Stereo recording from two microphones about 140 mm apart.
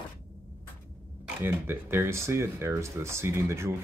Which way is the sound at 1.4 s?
15° right (ahead or behind).